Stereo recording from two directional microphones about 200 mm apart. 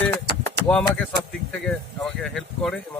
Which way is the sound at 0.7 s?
5° left (ahead or behind).